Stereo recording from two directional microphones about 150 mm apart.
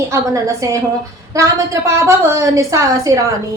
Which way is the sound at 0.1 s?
20° right (ahead or behind).